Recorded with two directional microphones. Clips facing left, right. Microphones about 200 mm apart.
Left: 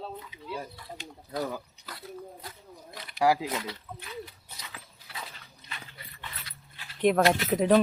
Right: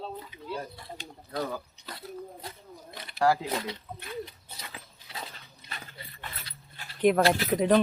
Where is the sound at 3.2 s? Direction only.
10° left (ahead or behind).